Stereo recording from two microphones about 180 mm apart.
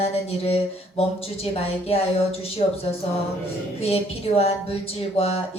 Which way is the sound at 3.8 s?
35° left (ahead or behind).